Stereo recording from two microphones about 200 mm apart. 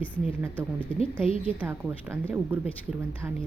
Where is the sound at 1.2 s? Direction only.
30° left (ahead or behind).